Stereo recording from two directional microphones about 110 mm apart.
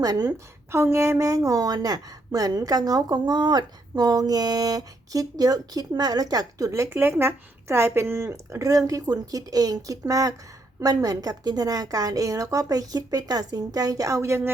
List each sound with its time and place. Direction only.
0.0 s a woman's voice: 35° right (ahead or behind)
0.7 s a woman's voice: 25° right (ahead or behind)
6.9 s a woman's voice: 20° right (ahead or behind)